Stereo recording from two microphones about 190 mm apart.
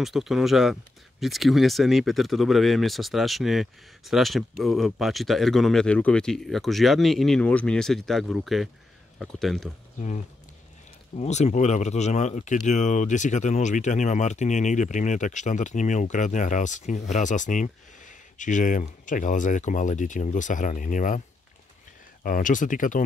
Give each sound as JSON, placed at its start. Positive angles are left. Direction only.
{"t": 0.0, "sound": "speech", "side_deg": 0}
{"t": 9.9, "sound": "speech", "side_deg": 40}
{"t": 22.2, "sound": "speech", "side_deg": 45}